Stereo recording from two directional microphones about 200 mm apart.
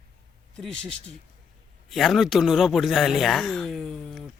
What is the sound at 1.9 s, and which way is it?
Speech, centre (ahead or behind).